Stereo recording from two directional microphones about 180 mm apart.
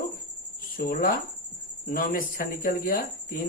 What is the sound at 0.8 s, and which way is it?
Speech, 55° left (ahead or behind).